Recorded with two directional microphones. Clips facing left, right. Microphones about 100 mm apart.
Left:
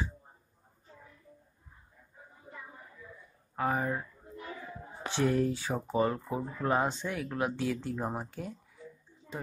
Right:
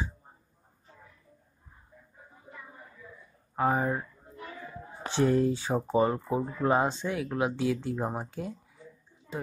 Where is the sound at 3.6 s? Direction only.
20° right (ahead or behind).